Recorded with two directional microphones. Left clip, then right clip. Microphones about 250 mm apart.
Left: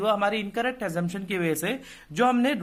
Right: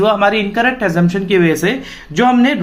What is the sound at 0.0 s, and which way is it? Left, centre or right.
Speech, left.